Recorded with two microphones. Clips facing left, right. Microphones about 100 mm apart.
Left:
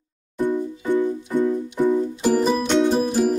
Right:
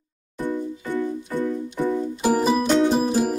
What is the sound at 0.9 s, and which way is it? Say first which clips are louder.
Music: left 5 dB; 20° left (ahead or behind).